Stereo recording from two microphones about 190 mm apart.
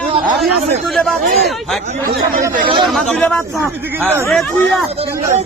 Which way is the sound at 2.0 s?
50° right (ahead or behind).